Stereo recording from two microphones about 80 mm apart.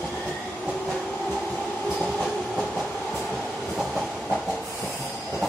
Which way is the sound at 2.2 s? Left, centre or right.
Centre.